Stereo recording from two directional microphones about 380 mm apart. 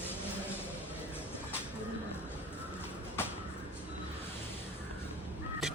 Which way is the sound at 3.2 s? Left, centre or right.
Centre.